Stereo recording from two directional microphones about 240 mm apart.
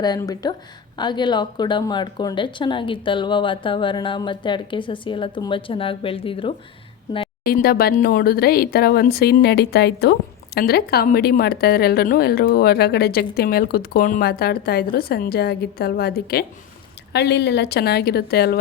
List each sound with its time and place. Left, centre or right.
0.0 s speech: centre
7.4 s speech: left